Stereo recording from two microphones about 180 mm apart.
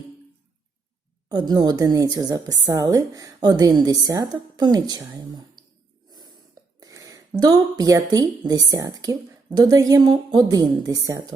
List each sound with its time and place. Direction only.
1.3 s a woman's voice: 25° right (ahead or behind)
6.1 s a sound: 20° right (ahead or behind)
6.7 s a woman's voice: 20° right (ahead or behind)